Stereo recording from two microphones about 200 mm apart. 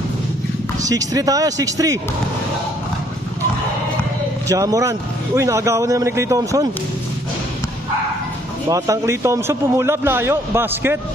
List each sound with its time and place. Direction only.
0.8 s speech: 15° right (ahead or behind)
4.5 s speech: 15° right (ahead or behind)
8.6 s speech: 15° right (ahead or behind)